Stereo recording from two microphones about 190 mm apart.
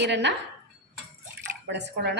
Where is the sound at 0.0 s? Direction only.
65° right (ahead or behind).